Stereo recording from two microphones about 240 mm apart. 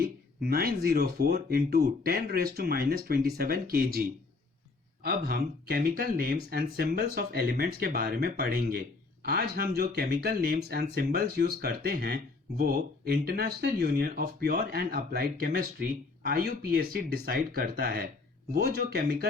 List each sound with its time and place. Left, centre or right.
0.0 s speech: right
5.0 s speech: right